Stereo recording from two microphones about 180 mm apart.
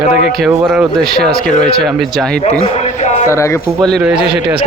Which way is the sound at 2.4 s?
35° left (ahead or behind).